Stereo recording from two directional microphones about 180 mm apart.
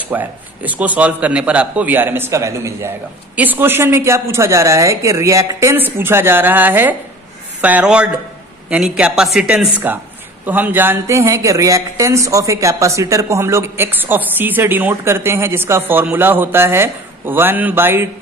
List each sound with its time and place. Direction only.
0.1 s speech: 10° right (ahead or behind)